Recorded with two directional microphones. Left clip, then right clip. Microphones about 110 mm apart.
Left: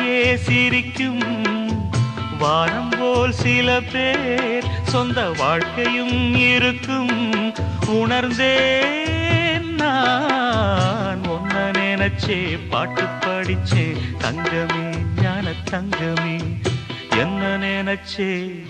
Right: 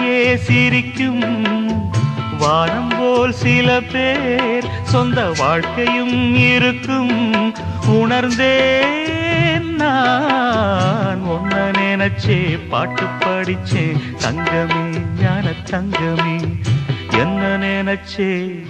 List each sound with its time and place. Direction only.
0.0 s music: 30° left (ahead or behind)
17.2 s music: 35° left (ahead or behind)